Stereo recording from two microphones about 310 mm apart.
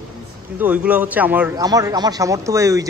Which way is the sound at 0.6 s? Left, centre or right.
Centre.